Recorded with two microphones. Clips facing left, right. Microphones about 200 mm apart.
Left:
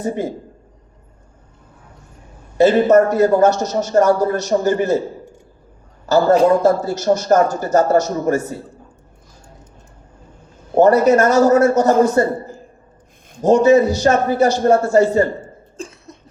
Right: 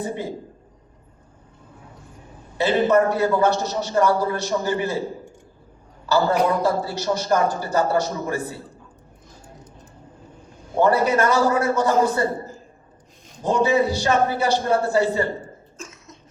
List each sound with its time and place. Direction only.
0.0 s a man's voice: 45° left (ahead or behind)
2.6 s a man's voice: 45° left (ahead or behind)
6.1 s a man's voice: 45° left (ahead or behind)
10.8 s a man's voice: 45° left (ahead or behind)
13.4 s a man's voice: 45° left (ahead or behind)
15.8 s cough: 35° left (ahead or behind)